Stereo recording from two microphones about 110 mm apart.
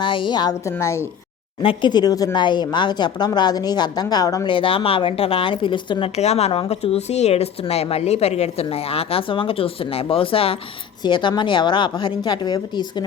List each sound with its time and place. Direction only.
0.0 s a woman's voice: 50° left (ahead or behind)
0.6 s a woman's voice: 25° left (ahead or behind)
1.6 s speech: 45° left (ahead or behind)
4.4 s a woman's voice: 50° left (ahead or behind)
6.1 s speech: 75° left (ahead or behind); by 10.6 s 60° left (ahead or behind)
11.0 s a woman's voice: 45° left (ahead or behind)